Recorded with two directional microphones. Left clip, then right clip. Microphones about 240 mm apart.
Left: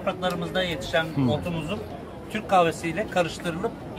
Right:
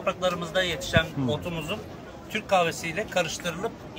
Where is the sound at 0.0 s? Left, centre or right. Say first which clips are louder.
Even; centre.